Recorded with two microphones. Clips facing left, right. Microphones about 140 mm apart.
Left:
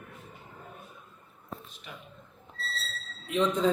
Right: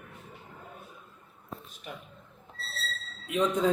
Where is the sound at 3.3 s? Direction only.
5° right (ahead or behind).